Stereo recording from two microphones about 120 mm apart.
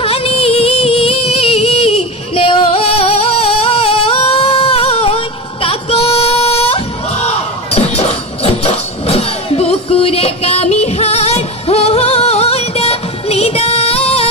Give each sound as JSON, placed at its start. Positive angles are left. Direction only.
{"t": 0.0, "sound": "music", "side_deg": 50}